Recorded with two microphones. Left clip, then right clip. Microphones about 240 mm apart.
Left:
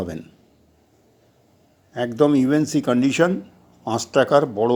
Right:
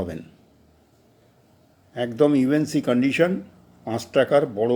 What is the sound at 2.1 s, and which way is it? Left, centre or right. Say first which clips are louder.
Speech: left 2 dB; left.